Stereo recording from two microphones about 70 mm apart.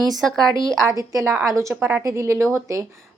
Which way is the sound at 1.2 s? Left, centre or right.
Right.